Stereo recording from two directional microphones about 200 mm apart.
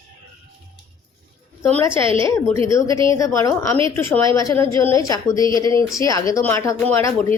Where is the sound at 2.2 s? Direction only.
15° left (ahead or behind).